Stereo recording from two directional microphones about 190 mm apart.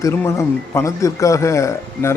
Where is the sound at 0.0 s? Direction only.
15° left (ahead or behind).